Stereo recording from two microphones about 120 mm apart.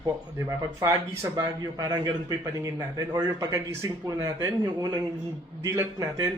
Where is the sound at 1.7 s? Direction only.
35° right (ahead or behind).